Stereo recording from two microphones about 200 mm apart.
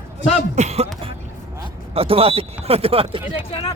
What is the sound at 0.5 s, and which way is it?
Speech, 35° right (ahead or behind).